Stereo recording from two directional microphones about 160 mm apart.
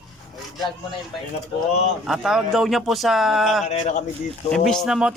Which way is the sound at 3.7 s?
45° left (ahead or behind).